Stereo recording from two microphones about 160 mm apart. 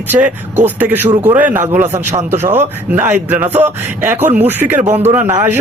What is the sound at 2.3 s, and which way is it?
Speech, 15° right (ahead or behind).